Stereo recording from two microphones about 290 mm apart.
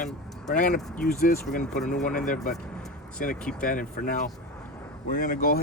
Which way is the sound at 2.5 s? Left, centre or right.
Centre.